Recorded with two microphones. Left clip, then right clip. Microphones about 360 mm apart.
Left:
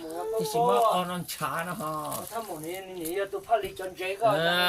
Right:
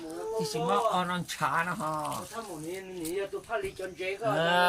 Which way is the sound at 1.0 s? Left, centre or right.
Centre.